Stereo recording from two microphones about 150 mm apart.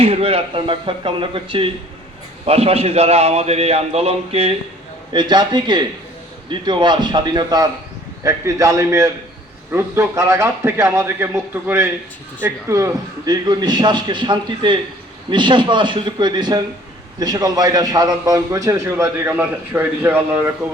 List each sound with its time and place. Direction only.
0.0 s a man's voice: 40° right (ahead or behind)
5.1 s a man's voice: 30° right (ahead or behind); by 20.5 s 15° right (ahead or behind)